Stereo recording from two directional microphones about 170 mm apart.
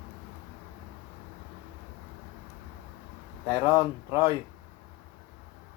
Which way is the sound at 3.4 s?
25° left (ahead or behind).